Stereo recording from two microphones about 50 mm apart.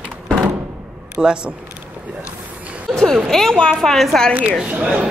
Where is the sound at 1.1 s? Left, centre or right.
Centre.